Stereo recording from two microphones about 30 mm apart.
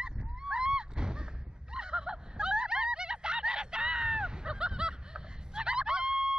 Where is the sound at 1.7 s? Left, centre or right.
Right.